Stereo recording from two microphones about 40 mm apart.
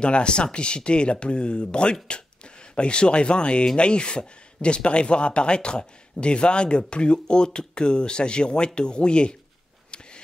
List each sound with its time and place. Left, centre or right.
0.0 s speech: left